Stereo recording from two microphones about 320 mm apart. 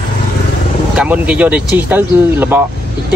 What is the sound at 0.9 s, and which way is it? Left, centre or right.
Speech, centre.